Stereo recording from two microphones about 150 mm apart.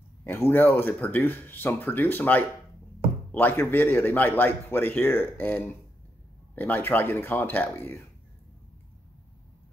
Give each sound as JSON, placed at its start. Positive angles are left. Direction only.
{"t": 0.2, "sound": "a man's voice", "side_deg": 15}